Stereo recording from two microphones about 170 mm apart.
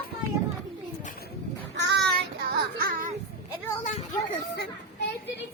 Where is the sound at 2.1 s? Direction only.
65° right (ahead or behind).